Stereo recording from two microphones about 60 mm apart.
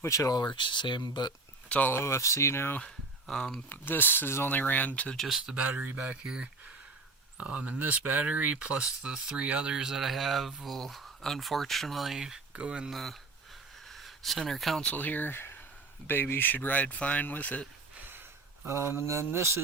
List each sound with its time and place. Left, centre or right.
0.0 s speech: left
1.9 s speech: left
3.2 s speech: centre
3.7 s speech: left
5.1 s speech: centre
5.6 s speech: right
6.2 s speech: centre
8.7 s speech: centre
12.5 s speech: centre
12.9 s speech: centre
13.8 s a sound: centre
14.9 s speech: left
18.6 s mantra: right